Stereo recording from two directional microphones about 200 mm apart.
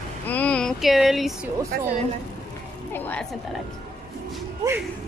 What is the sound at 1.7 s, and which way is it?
Speech, 50° right (ahead or behind).